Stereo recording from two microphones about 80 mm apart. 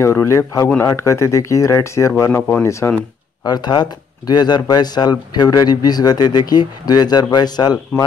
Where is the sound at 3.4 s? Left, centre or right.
Left.